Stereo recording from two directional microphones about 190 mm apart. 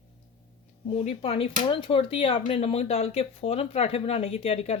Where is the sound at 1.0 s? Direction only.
30° left (ahead or behind).